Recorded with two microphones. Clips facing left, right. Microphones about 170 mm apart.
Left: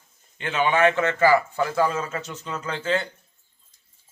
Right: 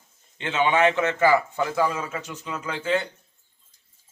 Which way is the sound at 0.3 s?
20° right (ahead or behind).